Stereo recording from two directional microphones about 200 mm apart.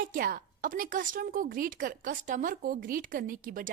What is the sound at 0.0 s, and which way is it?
A woman's voice, 45° right (ahead or behind).